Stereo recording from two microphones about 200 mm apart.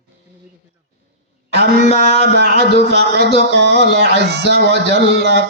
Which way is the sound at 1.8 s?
35° left (ahead or behind).